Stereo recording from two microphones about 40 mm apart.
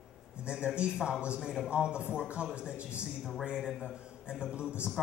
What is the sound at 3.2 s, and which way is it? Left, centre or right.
Speech, centre.